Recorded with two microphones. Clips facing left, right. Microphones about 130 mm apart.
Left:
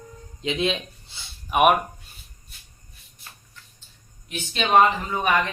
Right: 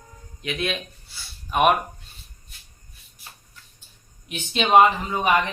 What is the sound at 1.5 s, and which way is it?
Speech, 10° left (ahead or behind).